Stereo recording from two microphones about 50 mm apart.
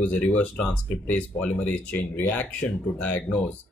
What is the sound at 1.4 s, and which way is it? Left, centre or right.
Speech, left.